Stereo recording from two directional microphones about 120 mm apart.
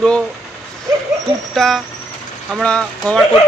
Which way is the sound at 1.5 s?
Centre (ahead or behind).